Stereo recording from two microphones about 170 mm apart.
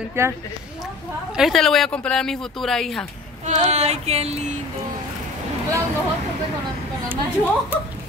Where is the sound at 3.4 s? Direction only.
45° right (ahead or behind).